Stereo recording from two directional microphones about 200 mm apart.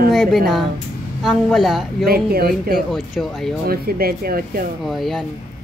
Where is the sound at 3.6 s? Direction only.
50° right (ahead or behind).